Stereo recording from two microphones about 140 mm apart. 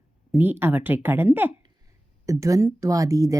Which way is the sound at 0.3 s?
15° right (ahead or behind).